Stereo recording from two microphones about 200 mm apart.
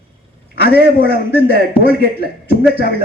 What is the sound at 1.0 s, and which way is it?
A man's voice, 50° right (ahead or behind).